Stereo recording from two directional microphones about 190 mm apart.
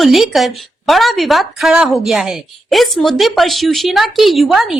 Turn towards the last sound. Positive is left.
turn(degrees=0)  # may be behind; listen again after turning